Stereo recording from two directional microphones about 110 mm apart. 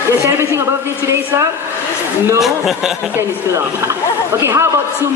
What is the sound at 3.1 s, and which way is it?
A woman's voice, 25° right (ahead or behind).